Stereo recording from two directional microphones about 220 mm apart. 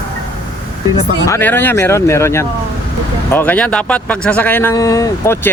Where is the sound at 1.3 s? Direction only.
10° left (ahead or behind).